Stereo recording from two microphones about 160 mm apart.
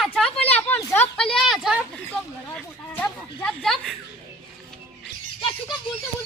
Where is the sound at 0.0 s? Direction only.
5° left (ahead or behind).